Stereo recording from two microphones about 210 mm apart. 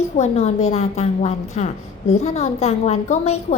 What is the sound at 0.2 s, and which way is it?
A woman's voice, 30° left (ahead or behind).